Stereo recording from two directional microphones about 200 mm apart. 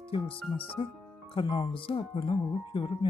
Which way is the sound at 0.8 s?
30° left (ahead or behind).